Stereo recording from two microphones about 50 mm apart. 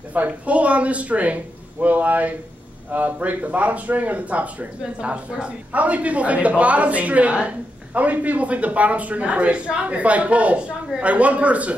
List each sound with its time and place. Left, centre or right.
0.1 s speech: right